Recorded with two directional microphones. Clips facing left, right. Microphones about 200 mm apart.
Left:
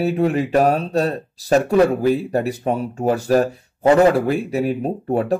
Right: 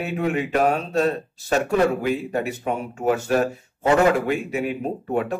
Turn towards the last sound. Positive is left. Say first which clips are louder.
# left 4 dB
turn(degrees=35)  # may be behind; listen again after turning